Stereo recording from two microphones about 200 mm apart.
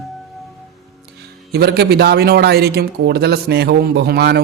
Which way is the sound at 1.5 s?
50° right (ahead or behind).